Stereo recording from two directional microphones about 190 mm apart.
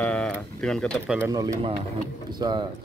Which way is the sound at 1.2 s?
15° right (ahead or behind).